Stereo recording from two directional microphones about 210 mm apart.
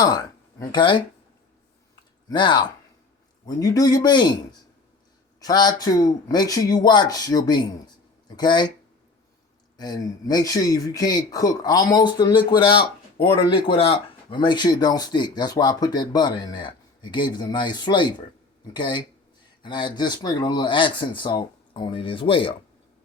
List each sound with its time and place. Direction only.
0.0 s speech: 20° left (ahead or behind)
2.3 s speech: 20° left (ahead or behind)
5.4 s speech: 20° left (ahead or behind)
9.7 s speech: 20° left (ahead or behind)